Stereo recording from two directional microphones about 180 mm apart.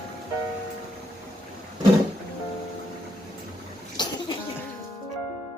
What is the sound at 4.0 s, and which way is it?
Cough, 25° left (ahead or behind).